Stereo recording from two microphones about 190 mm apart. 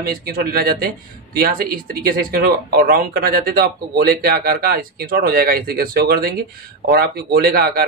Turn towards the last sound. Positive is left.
turn(degrees=-50)  # may be behind; listen again after turning